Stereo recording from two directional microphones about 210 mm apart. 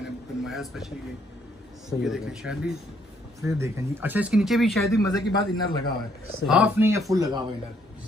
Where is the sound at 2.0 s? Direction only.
Centre (ahead or behind).